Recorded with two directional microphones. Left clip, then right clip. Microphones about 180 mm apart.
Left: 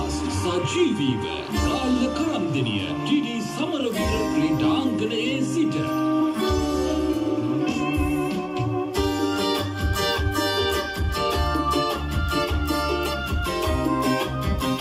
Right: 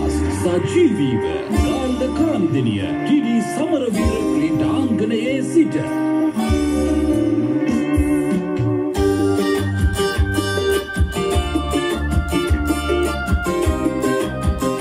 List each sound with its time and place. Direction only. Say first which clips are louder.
0.5 s music: right 6 dB; 45° right (ahead or behind)
3.1 s music: right 7 dB; 40° right (ahead or behind)